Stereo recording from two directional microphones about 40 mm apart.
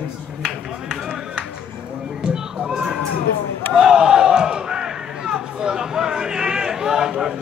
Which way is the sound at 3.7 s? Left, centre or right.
Centre.